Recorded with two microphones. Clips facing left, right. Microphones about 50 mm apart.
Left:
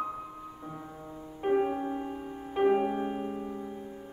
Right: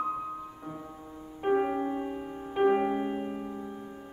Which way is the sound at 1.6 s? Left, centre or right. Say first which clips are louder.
Right 1 dB; centre.